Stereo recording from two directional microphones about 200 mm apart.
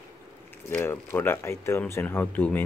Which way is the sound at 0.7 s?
10° left (ahead or behind).